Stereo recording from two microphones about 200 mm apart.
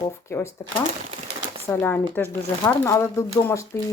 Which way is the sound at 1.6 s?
15° left (ahead or behind).